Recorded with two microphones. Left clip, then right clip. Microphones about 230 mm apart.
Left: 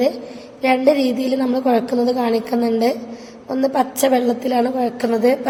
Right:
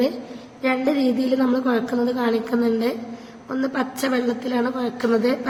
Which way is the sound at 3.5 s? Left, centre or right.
Centre.